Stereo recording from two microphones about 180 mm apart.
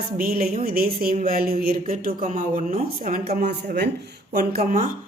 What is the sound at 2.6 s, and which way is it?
A woman's voice, 40° right (ahead or behind).